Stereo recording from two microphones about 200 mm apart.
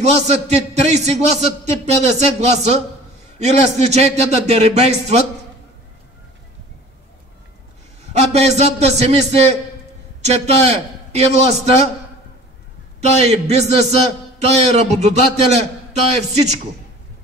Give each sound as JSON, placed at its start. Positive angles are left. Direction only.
{"t": 0.0, "sound": "a man's voice", "side_deg": -35}
{"t": 8.1, "sound": "a man's voice", "side_deg": -35}
{"t": 13.0, "sound": "a man's voice", "side_deg": -35}